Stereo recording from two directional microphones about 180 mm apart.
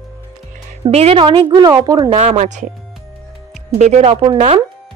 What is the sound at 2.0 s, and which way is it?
Speech, 40° right (ahead or behind).